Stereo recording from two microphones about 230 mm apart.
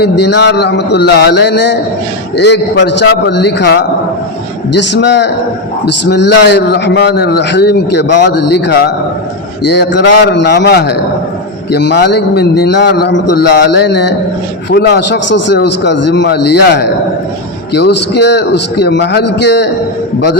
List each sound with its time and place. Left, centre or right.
0.0 s a man's voice: left